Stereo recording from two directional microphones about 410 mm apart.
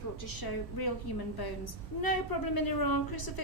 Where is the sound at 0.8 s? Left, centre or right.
Left.